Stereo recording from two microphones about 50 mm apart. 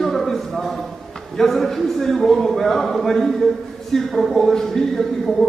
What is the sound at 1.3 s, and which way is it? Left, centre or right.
A man's voice, centre.